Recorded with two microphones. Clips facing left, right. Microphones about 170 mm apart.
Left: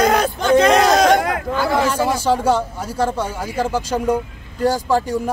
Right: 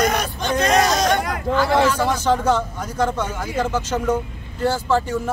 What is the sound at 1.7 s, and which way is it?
Speech, 10° left (ahead or behind).